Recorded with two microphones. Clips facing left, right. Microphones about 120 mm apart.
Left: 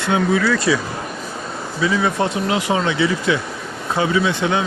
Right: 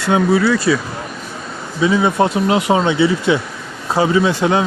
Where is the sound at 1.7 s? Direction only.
25° right (ahead or behind).